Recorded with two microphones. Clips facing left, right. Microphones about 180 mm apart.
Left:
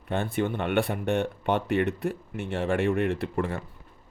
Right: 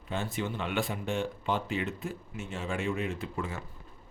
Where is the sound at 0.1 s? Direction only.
60° left (ahead or behind).